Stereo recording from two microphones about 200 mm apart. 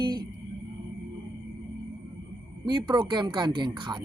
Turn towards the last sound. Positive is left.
turn(degrees=-25)  # may be behind; listen again after turning